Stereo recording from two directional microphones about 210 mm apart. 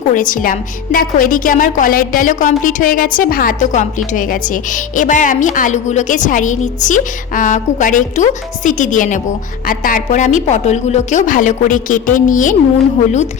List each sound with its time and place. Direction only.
0.1 s a woman's voice: 40° left (ahead or behind)